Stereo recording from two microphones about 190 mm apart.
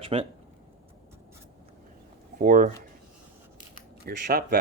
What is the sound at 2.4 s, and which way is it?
Speech, 45° right (ahead or behind).